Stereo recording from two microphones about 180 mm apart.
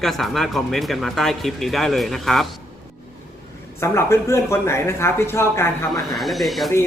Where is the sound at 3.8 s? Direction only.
15° left (ahead or behind).